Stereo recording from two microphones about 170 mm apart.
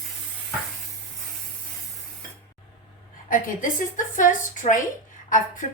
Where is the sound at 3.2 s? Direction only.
50° left (ahead or behind).